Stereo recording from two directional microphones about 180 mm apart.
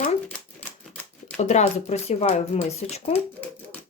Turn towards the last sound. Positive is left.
turn(degrees=35)  # may be behind; listen again after turning